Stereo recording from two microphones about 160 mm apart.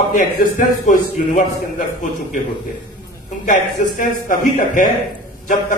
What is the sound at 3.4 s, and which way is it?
A man's voice, 55° left (ahead or behind).